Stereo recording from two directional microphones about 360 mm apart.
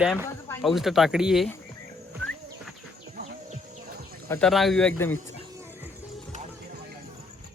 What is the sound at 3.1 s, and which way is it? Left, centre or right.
Insect, right.